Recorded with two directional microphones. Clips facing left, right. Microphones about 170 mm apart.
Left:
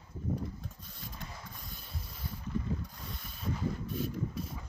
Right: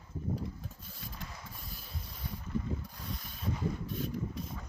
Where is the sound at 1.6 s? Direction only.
Centre (ahead or behind).